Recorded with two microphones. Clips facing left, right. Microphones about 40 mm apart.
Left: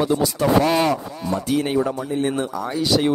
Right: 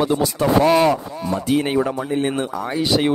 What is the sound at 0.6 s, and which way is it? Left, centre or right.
Speech, centre.